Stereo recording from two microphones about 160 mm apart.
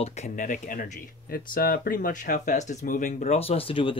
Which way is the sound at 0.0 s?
45° left (ahead or behind).